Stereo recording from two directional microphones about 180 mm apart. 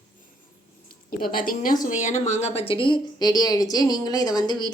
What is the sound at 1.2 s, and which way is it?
A woman's voice, 50° left (ahead or behind).